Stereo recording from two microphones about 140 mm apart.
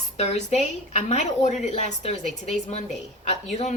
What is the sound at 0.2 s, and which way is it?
Speech, 50° left (ahead or behind).